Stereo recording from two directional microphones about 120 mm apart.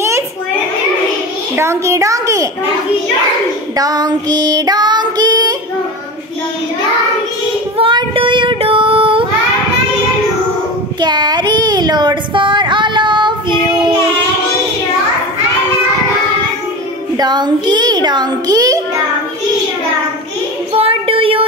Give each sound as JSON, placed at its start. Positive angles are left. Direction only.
{"t": 1.6, "sound": "a child's voice", "side_deg": -25}
{"t": 3.7, "sound": "child singing", "side_deg": -35}
{"t": 7.7, "sound": "child singing", "side_deg": -50}
{"t": 11.0, "sound": "a sound", "side_deg": -35}
{"t": 17.2, "sound": "a child's voice", "side_deg": -35}
{"t": 20.7, "sound": "child singing", "side_deg": -50}